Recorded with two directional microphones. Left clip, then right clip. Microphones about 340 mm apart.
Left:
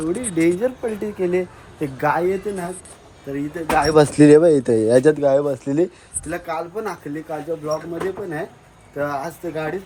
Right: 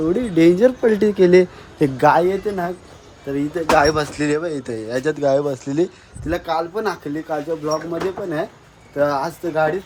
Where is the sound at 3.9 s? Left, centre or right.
Centre.